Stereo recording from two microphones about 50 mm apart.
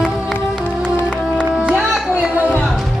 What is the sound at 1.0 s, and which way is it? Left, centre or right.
Music, centre.